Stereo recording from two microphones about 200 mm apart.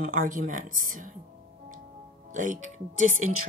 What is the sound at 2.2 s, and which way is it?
Speech, 40° right (ahead or behind).